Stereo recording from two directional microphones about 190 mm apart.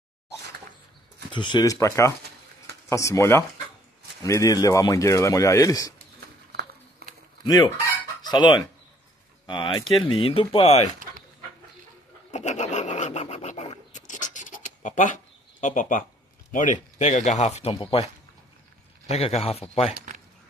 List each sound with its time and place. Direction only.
1.3 s speech: 25° left (ahead or behind)
6.5 s a sound: 55° right (ahead or behind)
7.4 s speech: 20° left (ahead or behind)
8.2 s fowl: 20° left (ahead or behind)
9.5 s speech: 25° left (ahead or behind)
12.3 s scratch: 40° left (ahead or behind)
15.6 s speech: 45° left (ahead or behind)
19.0 s speech: 35° left (ahead or behind)